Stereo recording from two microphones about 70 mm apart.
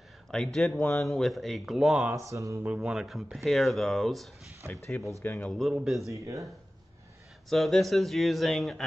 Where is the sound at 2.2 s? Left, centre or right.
Right.